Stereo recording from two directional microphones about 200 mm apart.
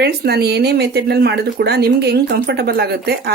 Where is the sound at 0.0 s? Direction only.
55° right (ahead or behind).